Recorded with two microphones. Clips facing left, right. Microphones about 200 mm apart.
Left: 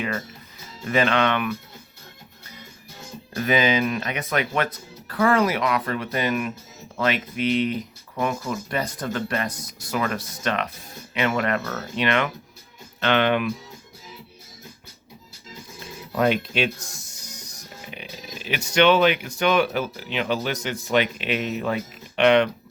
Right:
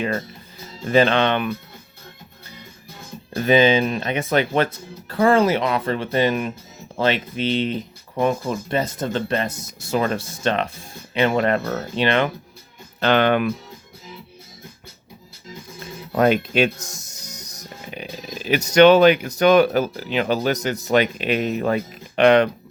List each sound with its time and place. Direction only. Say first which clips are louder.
0.9 s speech: right 4 dB; 30° right (ahead or behind)
3.3 s speech: right 5 dB; 30° right (ahead or behind); by 13.5 s 45° right (ahead or behind)
16.1 s speech: right 4 dB; 45° right (ahead or behind)